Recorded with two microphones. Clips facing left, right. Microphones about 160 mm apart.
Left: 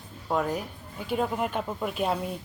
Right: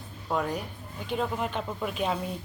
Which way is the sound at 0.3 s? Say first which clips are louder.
Left 2 dB; 5° left (ahead or behind).